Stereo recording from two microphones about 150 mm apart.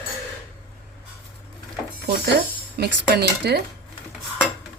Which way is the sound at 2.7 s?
90° right.